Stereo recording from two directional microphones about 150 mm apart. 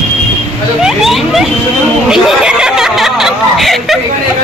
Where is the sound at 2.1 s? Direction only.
5° right (ahead or behind).